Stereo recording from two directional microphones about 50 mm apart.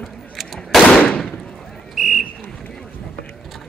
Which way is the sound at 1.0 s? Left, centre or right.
Left.